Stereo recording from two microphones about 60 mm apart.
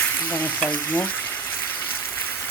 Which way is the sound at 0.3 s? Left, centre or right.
Left.